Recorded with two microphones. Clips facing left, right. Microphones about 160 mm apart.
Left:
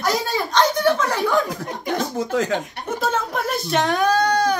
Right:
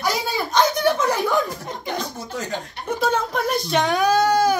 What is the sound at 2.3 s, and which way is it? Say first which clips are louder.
Speech: left 8 dB; 90° left.